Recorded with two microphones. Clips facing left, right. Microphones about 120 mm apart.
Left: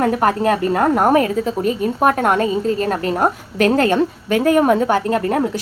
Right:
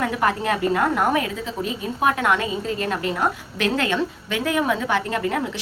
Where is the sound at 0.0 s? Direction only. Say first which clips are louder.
Left 6 dB; 45° left (ahead or behind).